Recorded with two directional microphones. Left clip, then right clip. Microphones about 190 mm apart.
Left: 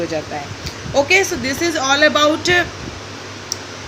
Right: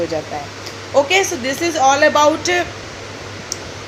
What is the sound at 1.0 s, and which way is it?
A man's voice, 45° left (ahead or behind).